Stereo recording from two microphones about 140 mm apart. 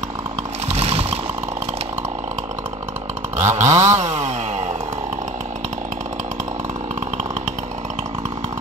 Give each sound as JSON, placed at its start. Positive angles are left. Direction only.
{"t": 0.7, "sound": "vehicle", "side_deg": -45}
{"t": 3.3, "sound": "chainsaw", "side_deg": -60}